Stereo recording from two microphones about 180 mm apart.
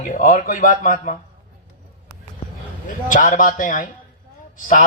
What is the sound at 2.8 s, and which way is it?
Speech, 45° left (ahead or behind).